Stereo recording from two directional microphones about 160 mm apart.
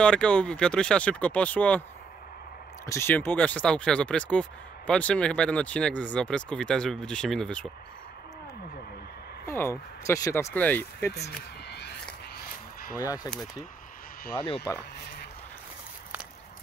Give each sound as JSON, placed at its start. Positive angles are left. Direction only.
{"t": 0.0, "sound": "speech", "side_deg": 5}
{"t": 2.9, "sound": "speech", "side_deg": 15}
{"t": 9.5, "sound": "speech", "side_deg": 15}
{"t": 11.7, "sound": "a sound", "side_deg": 90}
{"t": 13.0, "sound": "speech", "side_deg": 20}